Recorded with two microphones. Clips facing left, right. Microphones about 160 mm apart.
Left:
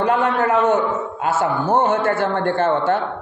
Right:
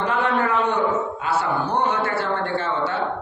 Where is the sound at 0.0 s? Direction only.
45° left (ahead or behind).